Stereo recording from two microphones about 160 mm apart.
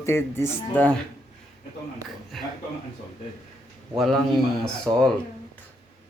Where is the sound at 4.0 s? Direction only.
Centre (ahead or behind).